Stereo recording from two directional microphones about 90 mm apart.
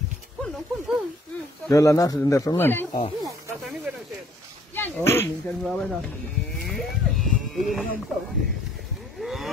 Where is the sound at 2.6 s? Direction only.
25° left (ahead or behind).